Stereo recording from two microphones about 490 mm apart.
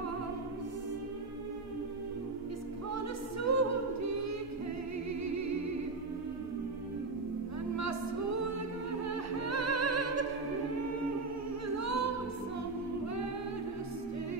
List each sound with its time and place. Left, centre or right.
3.4 s a capella: right
9.4 s music: right
11.7 s a capella: right